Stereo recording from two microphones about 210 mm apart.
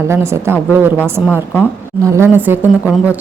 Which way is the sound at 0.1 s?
10° right (ahead or behind).